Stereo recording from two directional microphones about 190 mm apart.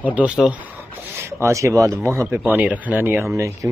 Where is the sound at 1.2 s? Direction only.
15° right (ahead or behind).